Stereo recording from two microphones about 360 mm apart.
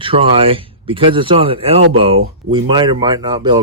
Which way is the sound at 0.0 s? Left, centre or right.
Centre.